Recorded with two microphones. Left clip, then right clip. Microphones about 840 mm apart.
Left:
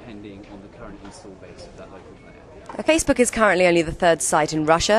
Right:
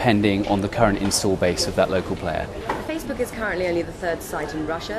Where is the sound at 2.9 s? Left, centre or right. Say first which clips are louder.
Left 8 dB; left.